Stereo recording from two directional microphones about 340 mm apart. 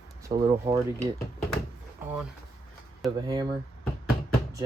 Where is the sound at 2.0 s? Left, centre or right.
Centre.